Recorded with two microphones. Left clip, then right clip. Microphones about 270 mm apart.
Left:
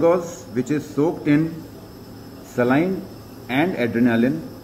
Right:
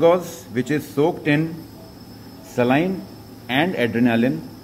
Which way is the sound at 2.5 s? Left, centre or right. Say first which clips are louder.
Even; right.